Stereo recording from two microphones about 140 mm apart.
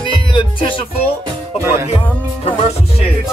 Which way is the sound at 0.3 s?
40° left (ahead or behind).